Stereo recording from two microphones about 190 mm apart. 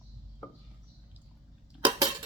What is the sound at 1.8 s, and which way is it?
Cutlery, 20° right (ahead or behind).